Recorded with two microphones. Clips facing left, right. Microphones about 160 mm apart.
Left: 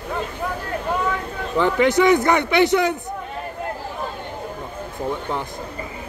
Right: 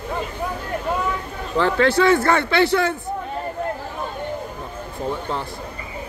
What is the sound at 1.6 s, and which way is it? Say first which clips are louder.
Speech: left 1 dB; 15° left (ahead or behind).